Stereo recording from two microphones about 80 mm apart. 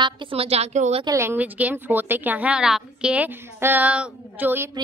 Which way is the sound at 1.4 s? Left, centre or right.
Centre.